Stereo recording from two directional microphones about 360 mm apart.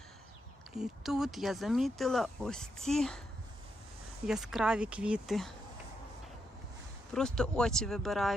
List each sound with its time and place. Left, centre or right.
0.7 s speech: centre
4.3 s speech: centre
7.1 s speech: centre